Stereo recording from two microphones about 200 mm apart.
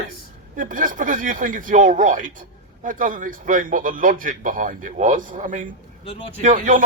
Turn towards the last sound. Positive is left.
turn(degrees=-40)  # may be behind; listen again after turning